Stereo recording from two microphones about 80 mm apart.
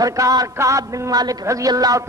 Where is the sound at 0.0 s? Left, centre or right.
Right.